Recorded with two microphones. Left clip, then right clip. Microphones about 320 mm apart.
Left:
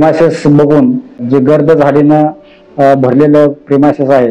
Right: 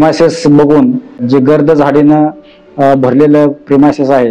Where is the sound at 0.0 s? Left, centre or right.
Right.